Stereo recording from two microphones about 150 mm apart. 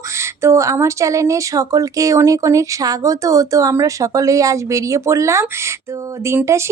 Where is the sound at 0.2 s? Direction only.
20° right (ahead or behind).